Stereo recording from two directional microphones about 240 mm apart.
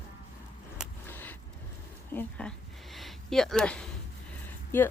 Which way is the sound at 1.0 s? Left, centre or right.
Centre.